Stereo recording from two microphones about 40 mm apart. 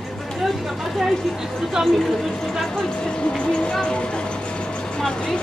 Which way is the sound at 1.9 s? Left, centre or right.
Centre.